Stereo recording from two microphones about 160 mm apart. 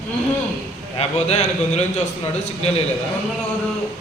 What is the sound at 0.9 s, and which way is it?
A man's voice, 45° left (ahead or behind).